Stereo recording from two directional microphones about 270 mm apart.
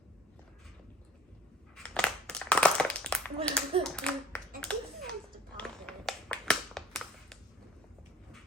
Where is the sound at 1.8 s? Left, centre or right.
Centre.